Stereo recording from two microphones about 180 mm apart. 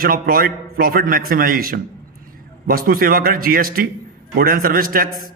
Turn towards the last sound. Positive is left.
turn(degrees=-55)  # may be behind; listen again after turning